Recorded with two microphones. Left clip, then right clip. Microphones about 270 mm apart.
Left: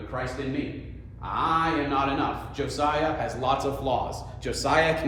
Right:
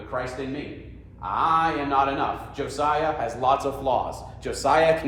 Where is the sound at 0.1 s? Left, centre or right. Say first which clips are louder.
Right 3 dB; centre.